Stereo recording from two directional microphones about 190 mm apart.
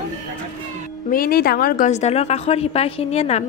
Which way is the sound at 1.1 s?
50° left (ahead or behind).